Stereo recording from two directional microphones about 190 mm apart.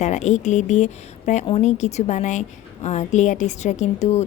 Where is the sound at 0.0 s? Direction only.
40° left (ahead or behind).